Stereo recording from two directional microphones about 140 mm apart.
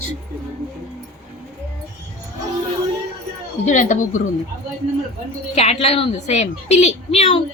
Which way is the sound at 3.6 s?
60° left (ahead or behind).